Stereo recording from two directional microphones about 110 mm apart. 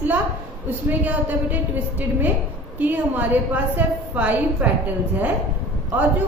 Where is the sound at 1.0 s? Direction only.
15° right (ahead or behind).